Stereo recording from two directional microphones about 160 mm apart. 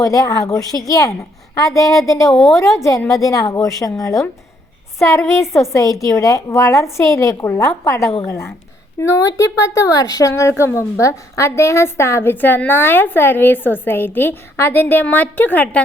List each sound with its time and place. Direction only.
0.0 s a woman's voice: 20° left (ahead or behind)